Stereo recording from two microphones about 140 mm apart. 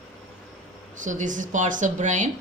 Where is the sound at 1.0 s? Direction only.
65° right (ahead or behind).